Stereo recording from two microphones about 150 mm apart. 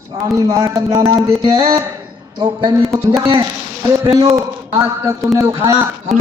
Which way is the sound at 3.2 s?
35° right (ahead or behind).